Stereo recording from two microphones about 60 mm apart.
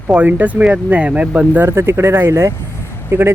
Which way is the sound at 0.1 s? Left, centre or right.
Right.